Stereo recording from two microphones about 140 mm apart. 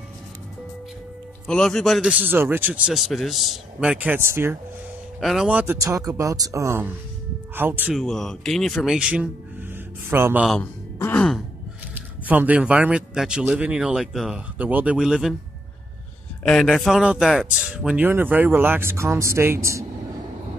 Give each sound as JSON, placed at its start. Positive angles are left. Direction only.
{"t": 1.5, "sound": "speech", "side_deg": 5}
{"t": 2.0, "sound": "speech", "side_deg": -10}
{"t": 5.2, "sound": "speech", "side_deg": -5}
{"t": 5.9, "sound": "speech", "side_deg": -25}
{"t": 7.9, "sound": "speech", "side_deg": 0}
{"t": 10.6, "sound": "a sound", "side_deg": 15}
{"t": 11.9, "sound": "speech", "side_deg": -10}
{"t": 16.4, "sound": "speech", "side_deg": 5}